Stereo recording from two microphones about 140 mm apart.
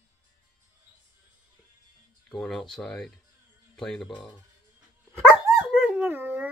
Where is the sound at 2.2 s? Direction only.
5° left (ahead or behind).